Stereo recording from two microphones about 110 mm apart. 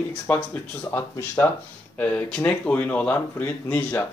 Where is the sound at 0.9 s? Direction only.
25° left (ahead or behind).